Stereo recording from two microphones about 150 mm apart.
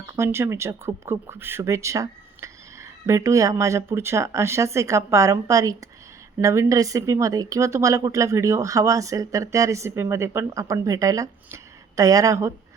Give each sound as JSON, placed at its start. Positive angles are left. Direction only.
{"t": 0.2, "sound": "speech", "side_deg": -15}